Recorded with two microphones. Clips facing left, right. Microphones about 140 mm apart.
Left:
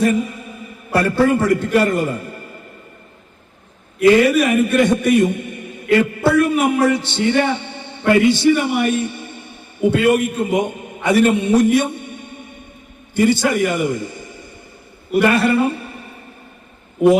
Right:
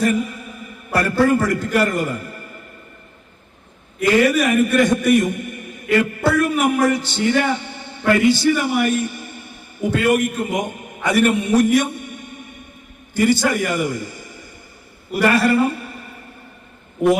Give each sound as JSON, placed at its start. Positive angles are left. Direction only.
{"t": 0.0, "sound": "a sound", "side_deg": 25}
{"t": 0.9, "sound": "a man's voice", "side_deg": 25}
{"t": 4.0, "sound": "a man's voice", "side_deg": 0}
{"t": 4.8, "sound": "a man's voice", "side_deg": 25}
{"t": 7.3, "sound": "a sound", "side_deg": 25}
{"t": 8.1, "sound": "a man's voice", "side_deg": 25}
{"t": 15.1, "sound": "a man's voice", "side_deg": 0}
{"t": 15.6, "sound": "music", "side_deg": 25}